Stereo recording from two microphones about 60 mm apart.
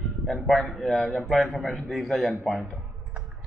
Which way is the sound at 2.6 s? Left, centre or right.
Centre.